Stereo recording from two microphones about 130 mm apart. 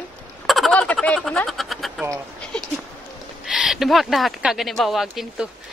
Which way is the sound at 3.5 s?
5° right (ahead or behind).